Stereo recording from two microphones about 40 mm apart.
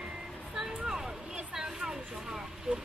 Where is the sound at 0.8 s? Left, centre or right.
Centre.